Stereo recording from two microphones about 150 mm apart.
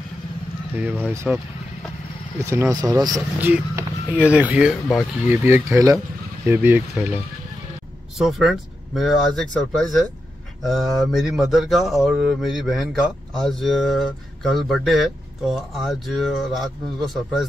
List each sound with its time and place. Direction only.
0.7 s speech: 10° right (ahead or behind)
2.4 s speech: 20° right (ahead or behind)
3.3 s a sound: 10° right (ahead or behind)
4.3 s speech: 10° right (ahead or behind)
8.2 s speech: centre (ahead or behind)